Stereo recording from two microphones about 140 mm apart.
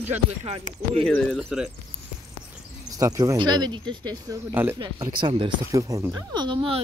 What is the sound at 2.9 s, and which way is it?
Speech, 25° right (ahead or behind).